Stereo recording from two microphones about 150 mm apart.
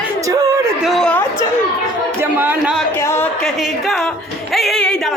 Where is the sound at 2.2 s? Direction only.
10° right (ahead or behind).